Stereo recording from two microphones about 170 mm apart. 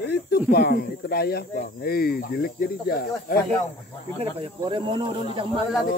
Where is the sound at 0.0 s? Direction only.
70° left (ahead or behind).